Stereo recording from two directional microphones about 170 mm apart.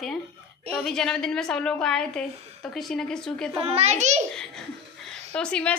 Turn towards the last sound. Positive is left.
turn(degrees=5)  # may be behind; listen again after turning